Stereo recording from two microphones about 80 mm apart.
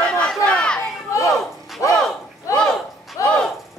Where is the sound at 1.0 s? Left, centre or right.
Left.